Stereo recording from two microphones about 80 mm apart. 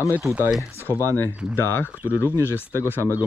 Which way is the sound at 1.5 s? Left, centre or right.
Left.